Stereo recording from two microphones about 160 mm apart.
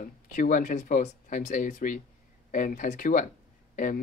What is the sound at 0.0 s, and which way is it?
Speech, 55° left (ahead or behind).